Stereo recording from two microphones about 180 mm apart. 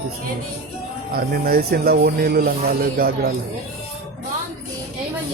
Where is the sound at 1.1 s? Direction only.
55° right (ahead or behind).